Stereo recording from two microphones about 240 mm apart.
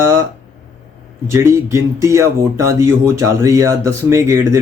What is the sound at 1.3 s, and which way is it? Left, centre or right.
Speech, centre.